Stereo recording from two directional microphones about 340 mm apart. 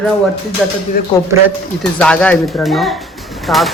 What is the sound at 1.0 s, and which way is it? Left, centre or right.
Speech, left.